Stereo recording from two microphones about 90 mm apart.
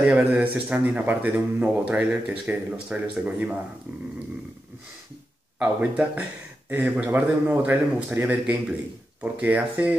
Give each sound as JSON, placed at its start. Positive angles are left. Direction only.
{"t": 0.0, "sound": "speech", "side_deg": -15}
{"t": 5.6, "sound": "speech", "side_deg": -15}